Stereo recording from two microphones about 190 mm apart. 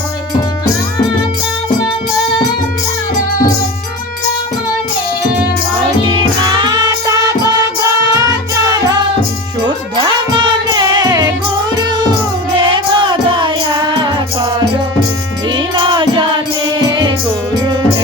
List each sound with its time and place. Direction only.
6.1 s music: 25° right (ahead or behind)
10.7 s music: 20° right (ahead or behind)
11.8 s cat: 20° right (ahead or behind)
12.5 s music: 25° right (ahead or behind)
15.5 s music: 25° right (ahead or behind)